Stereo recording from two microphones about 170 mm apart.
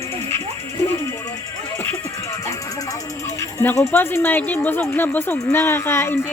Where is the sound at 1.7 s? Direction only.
15° left (ahead or behind).